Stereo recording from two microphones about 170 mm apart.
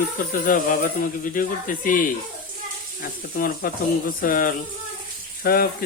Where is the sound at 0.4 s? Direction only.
55° left (ahead or behind).